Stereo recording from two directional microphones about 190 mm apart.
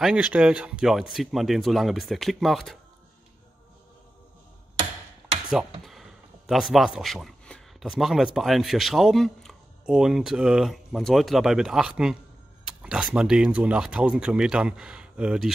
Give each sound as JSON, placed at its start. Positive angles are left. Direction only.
{"t": 0.0, "sound": "speech", "side_deg": -5}
{"t": 5.5, "sound": "speech", "side_deg": 0}